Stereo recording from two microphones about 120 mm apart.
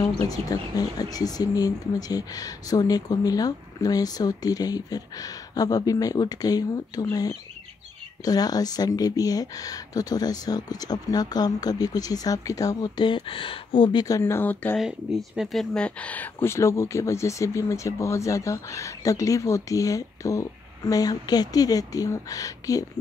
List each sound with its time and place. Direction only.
0.0 s speech: 30° left (ahead or behind)
14.2 s speech: 15° left (ahead or behind)
14.8 s speech: 5° right (ahead or behind); by 22.8 s 30° left (ahead or behind)